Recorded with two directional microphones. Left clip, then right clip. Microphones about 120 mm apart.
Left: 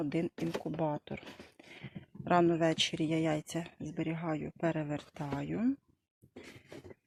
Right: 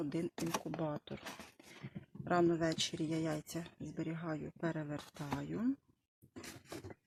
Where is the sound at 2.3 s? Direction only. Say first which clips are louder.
Left 5 dB; 25° left (ahead or behind).